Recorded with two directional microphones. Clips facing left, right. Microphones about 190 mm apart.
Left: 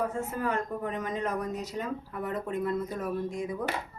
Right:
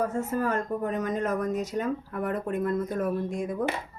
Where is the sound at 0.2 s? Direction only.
45° right (ahead or behind).